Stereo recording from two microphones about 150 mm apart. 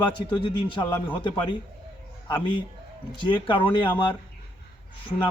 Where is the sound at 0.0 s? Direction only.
35° left (ahead or behind).